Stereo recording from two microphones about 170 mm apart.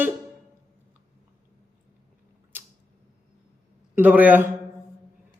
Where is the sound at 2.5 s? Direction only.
10° right (ahead or behind).